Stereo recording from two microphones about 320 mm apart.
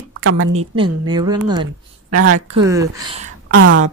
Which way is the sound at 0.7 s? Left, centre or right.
Centre.